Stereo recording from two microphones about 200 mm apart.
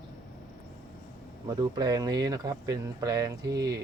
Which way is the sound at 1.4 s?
20° right (ahead or behind).